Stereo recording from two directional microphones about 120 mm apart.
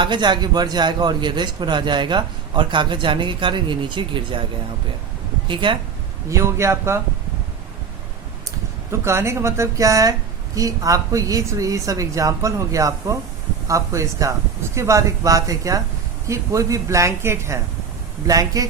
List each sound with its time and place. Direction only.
0.0 s a man's voice: 40° right (ahead or behind)
5.5 s speech: 40° right (ahead or behind)
6.2 s speech: 25° right (ahead or behind)
8.9 s speech: 20° right (ahead or behind)